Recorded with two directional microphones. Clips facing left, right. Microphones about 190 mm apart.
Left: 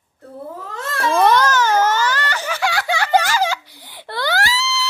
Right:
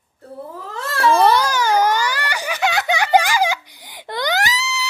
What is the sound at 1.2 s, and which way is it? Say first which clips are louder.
Baby cry: left 1 dB; 10° right (ahead or behind).